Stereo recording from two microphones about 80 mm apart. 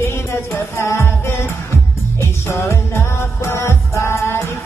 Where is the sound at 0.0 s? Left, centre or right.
Left.